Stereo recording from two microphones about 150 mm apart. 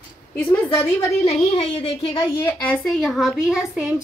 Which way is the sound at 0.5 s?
15° left (ahead or behind).